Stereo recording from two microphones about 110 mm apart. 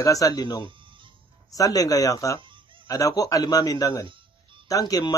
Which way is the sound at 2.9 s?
30° left (ahead or behind).